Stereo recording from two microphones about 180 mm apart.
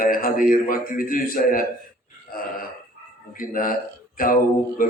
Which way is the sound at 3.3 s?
50° left (ahead or behind).